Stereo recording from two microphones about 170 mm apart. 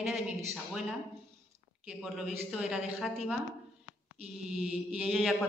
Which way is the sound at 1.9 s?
5° right (ahead or behind).